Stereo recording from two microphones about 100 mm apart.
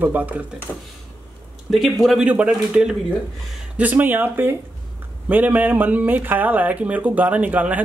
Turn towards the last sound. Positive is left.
turn(degrees=-15)  # may be behind; listen again after turning